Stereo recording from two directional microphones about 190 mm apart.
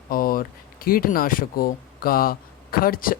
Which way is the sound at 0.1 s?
50° left (ahead or behind).